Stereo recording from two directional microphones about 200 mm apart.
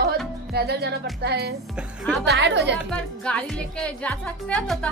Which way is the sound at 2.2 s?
60° right (ahead or behind).